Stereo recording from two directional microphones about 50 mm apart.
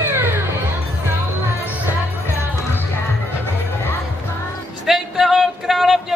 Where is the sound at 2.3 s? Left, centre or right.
Left.